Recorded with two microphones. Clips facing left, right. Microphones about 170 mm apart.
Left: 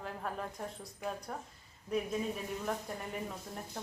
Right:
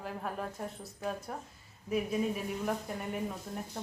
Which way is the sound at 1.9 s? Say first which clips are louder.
Right 2 dB; 5° right (ahead or behind).